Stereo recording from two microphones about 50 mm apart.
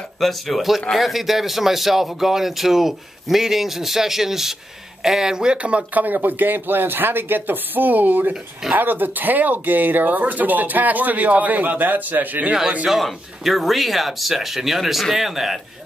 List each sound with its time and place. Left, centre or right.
0.2 s a man's voice: centre; by 6.0 s right
6.0 s speech: right
12.8 s a man's voice: centre